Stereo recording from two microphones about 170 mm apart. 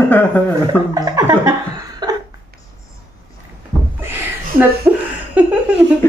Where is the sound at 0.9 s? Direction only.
20° right (ahead or behind).